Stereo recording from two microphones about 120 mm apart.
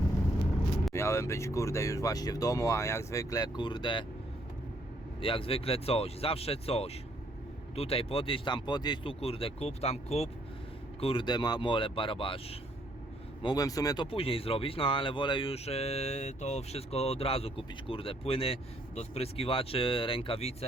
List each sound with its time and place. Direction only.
0.9 s speech: 25° left (ahead or behind); by 4.0 s 40° left (ahead or behind)
5.2 s speech: 50° left (ahead or behind)
9.2 s speech: 50° left (ahead or behind)
11.0 s speech: 45° left (ahead or behind)
13.4 s speech: 35° left (ahead or behind)
14.0 s speech: 50° left (ahead or behind)